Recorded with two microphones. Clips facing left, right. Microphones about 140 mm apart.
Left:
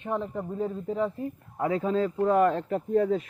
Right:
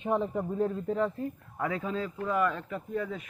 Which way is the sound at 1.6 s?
30° left (ahead or behind).